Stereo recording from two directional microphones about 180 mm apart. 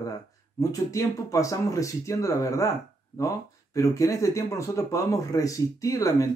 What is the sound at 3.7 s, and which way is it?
Speech, 20° left (ahead or behind).